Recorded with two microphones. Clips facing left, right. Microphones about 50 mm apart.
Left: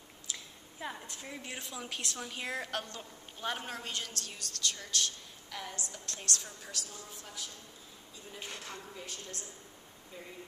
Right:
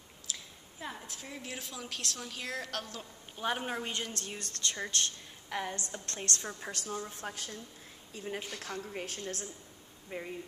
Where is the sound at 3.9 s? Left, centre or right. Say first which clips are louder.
Right 3 dB; right.